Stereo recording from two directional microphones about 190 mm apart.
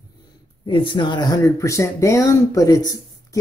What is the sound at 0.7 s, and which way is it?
Speech, 25° left (ahead or behind).